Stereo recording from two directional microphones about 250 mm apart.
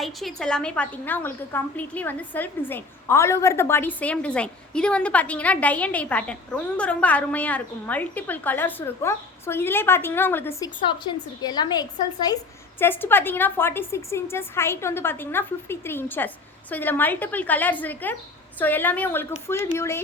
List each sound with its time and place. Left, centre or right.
0.0 s a woman's voice: centre